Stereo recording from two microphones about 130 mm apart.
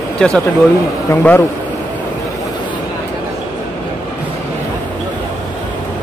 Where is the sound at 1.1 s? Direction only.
20° left (ahead or behind).